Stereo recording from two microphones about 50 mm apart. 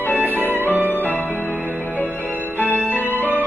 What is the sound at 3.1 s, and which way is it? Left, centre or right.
Music, right.